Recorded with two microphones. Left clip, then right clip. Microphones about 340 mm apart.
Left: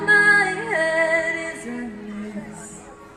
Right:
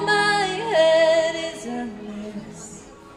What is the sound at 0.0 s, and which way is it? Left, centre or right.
Music, right.